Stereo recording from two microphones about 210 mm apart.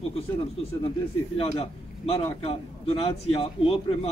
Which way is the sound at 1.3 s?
25° left (ahead or behind).